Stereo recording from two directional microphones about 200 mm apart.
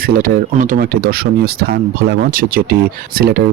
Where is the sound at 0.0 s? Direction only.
45° right (ahead or behind).